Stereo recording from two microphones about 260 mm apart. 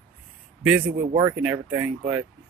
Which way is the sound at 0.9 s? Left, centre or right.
Right.